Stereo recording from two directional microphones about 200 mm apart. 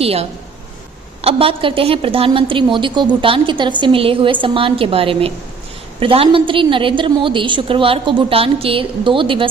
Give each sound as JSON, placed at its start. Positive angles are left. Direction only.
{"t": 0.0, "sound": "a woman's voice", "side_deg": -30}